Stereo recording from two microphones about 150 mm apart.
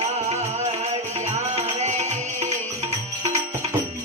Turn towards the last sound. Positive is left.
turn(degrees=-50)  # may be behind; listen again after turning